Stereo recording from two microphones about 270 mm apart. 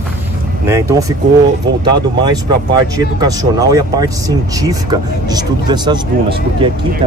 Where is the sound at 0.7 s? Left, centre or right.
Centre.